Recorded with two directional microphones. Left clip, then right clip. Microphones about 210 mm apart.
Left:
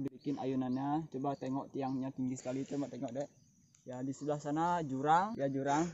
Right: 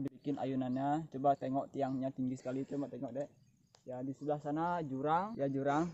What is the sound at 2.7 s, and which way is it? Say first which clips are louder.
Speech: left 1 dB; 40° left (ahead or behind).